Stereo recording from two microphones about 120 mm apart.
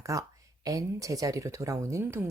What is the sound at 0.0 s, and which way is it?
Speech, 25° right (ahead or behind).